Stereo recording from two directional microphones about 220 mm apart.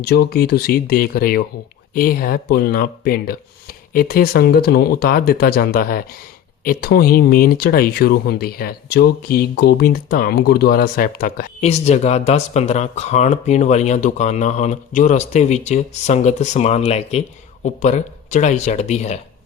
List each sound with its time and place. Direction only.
0.0 s speech: 45° left (ahead or behind)
11.6 s speech: 30° left (ahead or behind)